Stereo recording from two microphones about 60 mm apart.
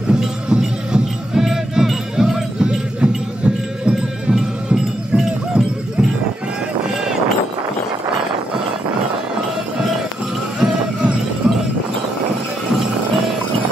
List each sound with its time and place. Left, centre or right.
0.1 s music: centre
10.6 s run: centre
11.4 s music: centre